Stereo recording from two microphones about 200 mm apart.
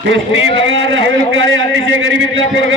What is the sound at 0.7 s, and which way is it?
A man's voice, 70° right (ahead or behind).